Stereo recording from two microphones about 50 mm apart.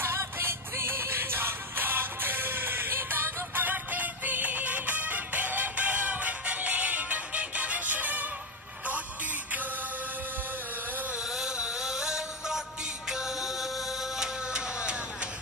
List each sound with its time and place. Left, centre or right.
0.0 s music: right
11.2 s music: centre
14.5 s a sound: centre